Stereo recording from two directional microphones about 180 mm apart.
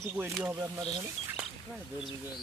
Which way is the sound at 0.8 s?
25° right (ahead or behind).